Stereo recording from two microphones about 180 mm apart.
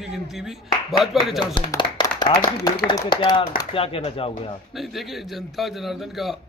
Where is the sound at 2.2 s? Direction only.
25° left (ahead or behind).